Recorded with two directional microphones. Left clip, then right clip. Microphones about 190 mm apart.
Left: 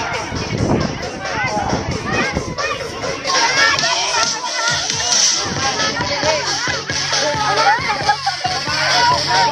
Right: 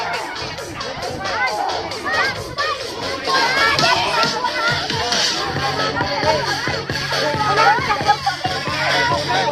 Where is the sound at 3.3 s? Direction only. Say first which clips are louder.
Left 2 dB; 60° right (ahead or behind).